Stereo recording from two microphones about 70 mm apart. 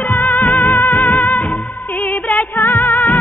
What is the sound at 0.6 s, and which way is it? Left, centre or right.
Music, left.